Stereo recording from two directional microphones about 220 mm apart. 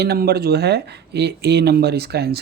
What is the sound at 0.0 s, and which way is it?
Speech, 45° right (ahead or behind).